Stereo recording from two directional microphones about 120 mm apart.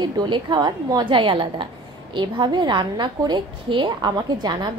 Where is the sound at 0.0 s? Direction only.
40° right (ahead or behind).